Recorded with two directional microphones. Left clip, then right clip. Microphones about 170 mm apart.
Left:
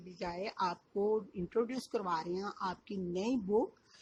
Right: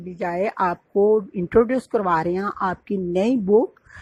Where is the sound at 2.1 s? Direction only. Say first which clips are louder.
Right 17 dB; 30° right (ahead or behind).